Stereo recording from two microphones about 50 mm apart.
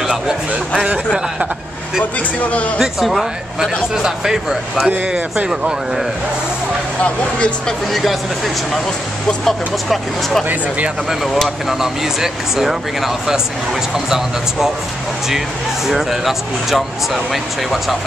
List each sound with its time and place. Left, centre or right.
0.0 s a sound: centre
2.4 s speech: left
2.8 s speech: centre
7.0 s speech: left
7.9 s speech: centre
9.4 s speech: centre
11.4 s speech: centre
15.9 s speech: centre